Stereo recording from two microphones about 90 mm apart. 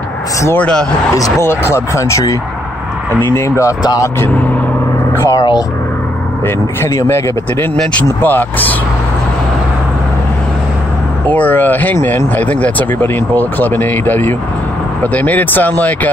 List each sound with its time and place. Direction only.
0.6 s a man's voice: 10° left (ahead or behind)
1.1 s speech: 40° left (ahead or behind)
1.5 s speech: 30° left (ahead or behind)
5.3 s speech: 50° left (ahead or behind)
6.4 s speech: 30° left (ahead or behind)
8.2 s speech: 20° left (ahead or behind)
11.2 s speech: 20° left (ahead or behind)